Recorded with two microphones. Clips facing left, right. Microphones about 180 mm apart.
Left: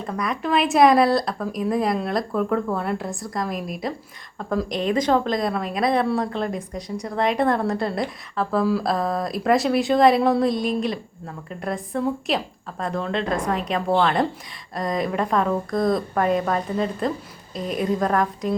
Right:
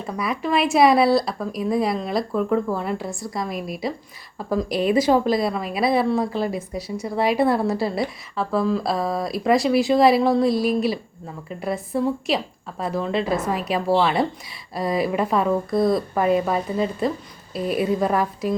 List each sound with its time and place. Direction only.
0.0 s a woman's voice: 5° right (ahead or behind)